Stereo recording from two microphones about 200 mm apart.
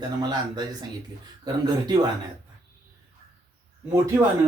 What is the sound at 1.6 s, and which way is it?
Speech, 20° right (ahead or behind).